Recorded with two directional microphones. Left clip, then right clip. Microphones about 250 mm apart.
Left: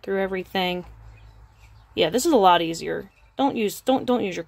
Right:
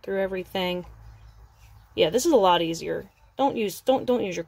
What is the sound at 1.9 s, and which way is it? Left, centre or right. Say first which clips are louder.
A woman's voice: even; centre.